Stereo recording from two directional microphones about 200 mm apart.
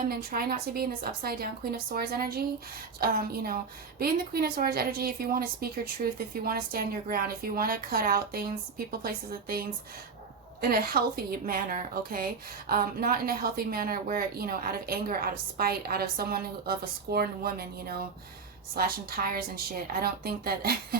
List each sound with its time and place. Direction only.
0.1 s a woman's voice: 45° right (ahead or behind)
18.7 s a woman's voice: 50° right (ahead or behind)